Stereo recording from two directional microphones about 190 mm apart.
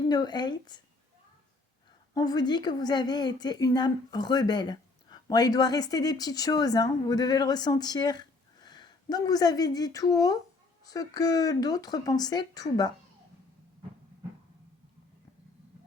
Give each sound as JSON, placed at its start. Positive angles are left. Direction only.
{"t": 0.1, "sound": "a woman's voice", "side_deg": 20}
{"t": 2.1, "sound": "a woman's voice", "side_deg": 20}